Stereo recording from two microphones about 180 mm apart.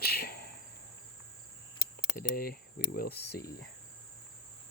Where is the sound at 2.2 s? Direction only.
55° left (ahead or behind).